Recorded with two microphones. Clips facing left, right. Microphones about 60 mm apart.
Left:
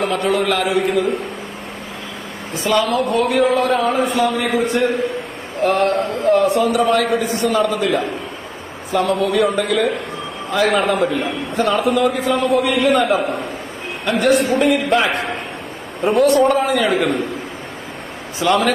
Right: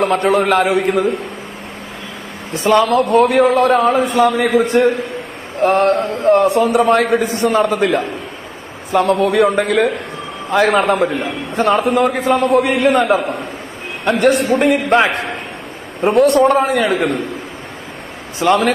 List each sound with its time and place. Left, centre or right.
0.0 s a man's voice: right
2.5 s a man's voice: right
4.5 s a man's voice: right
14.2 s a sound: right
16.2 s a man's voice: right
16.9 s a man's voice: centre
18.4 s a man's voice: right